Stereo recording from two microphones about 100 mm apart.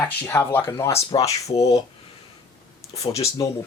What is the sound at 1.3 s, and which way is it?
Speech, 90° left.